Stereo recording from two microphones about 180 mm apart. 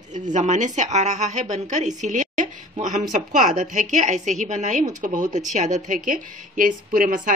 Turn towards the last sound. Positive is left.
turn(degrees=-45)  # may be behind; listen again after turning